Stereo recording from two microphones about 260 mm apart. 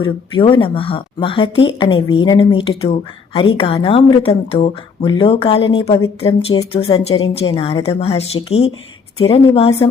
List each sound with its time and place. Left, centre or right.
0.0 s a woman's voice: centre